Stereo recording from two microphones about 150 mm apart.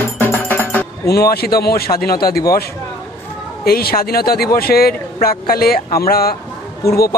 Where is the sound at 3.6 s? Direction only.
90° left.